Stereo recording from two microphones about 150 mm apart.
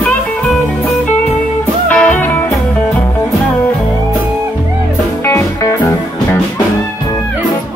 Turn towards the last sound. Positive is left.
turn(degrees=20)  # may be behind; listen again after turning